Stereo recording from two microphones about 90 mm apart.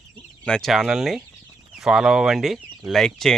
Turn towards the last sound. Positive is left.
turn(degrees=5)  # may be behind; listen again after turning